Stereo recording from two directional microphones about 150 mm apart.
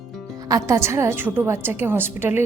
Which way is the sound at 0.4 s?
20° right (ahead or behind).